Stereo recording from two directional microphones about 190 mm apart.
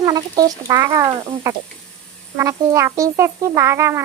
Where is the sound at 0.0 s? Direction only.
20° right (ahead or behind).